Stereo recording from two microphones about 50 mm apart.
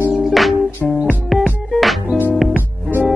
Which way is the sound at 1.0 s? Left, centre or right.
Right.